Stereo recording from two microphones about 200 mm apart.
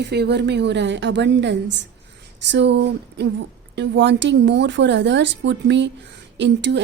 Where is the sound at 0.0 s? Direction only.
55° right (ahead or behind).